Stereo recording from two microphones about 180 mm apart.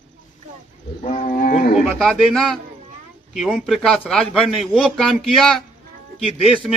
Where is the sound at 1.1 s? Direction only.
45° left (ahead or behind).